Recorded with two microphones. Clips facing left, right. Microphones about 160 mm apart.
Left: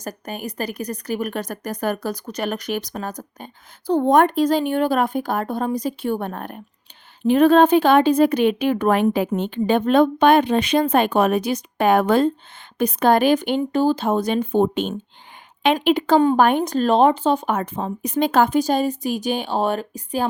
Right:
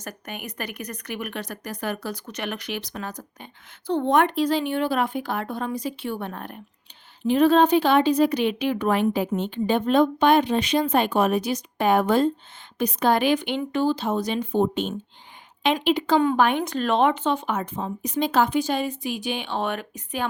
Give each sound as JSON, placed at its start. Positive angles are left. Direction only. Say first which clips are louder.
{"t": 0.0, "sound": "a woman's voice", "louder": "left 6 dB", "side_deg": 35}
{"t": 12.8, "sound": "a woman's voice", "louder": "left 4 dB", "side_deg": 55}
{"t": 16.2, "sound": "speech", "louder": "left 4 dB", "side_deg": 40}